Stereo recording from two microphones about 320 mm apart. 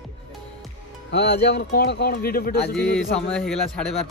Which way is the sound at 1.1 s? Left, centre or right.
Left.